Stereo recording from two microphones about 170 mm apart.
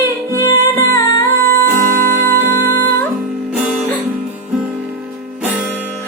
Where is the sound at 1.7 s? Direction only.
55° right (ahead or behind).